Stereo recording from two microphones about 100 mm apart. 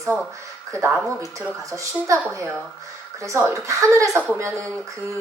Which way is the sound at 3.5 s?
30° right (ahead or behind).